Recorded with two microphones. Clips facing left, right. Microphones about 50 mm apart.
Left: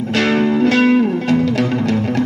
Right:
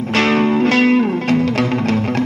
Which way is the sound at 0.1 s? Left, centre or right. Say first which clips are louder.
Right 1 dB; right.